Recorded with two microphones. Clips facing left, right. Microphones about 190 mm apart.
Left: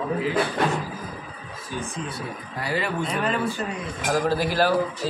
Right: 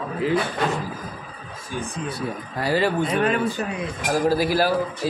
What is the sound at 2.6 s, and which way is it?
Speech, 35° right (ahead or behind).